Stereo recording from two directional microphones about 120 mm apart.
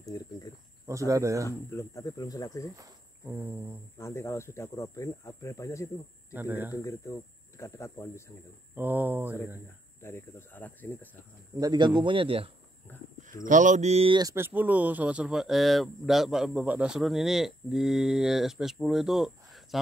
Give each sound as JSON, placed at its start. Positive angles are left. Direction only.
{"t": 0.0, "sound": "cricket", "side_deg": 30}
{"t": 0.8, "sound": "speech", "side_deg": -25}
{"t": 1.7, "sound": "speech", "side_deg": 25}
{"t": 3.3, "sound": "speech", "side_deg": -15}
{"t": 4.0, "sound": "speech", "side_deg": 20}
{"t": 6.3, "sound": "speech", "side_deg": -15}
{"t": 6.7, "sound": "speech", "side_deg": 25}
{"t": 8.7, "sound": "speech", "side_deg": -15}
{"t": 10.0, "sound": "speech", "side_deg": 20}
{"t": 11.6, "sound": "a man's voice", "side_deg": -35}
{"t": 13.3, "sound": "speech", "side_deg": -90}
{"t": 14.2, "sound": "speech", "side_deg": -20}